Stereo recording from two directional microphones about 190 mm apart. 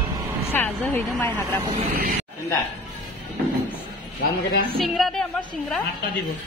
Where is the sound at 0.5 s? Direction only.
10° left (ahead or behind).